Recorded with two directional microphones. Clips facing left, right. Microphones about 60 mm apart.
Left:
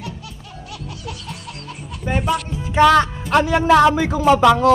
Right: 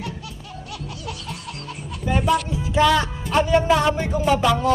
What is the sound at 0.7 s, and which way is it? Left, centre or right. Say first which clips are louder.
Music: left 1 dB; centre.